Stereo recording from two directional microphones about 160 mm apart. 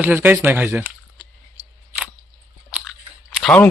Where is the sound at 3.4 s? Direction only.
10° left (ahead or behind).